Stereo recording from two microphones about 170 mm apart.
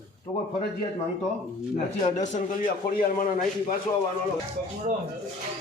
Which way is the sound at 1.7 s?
45° left (ahead or behind).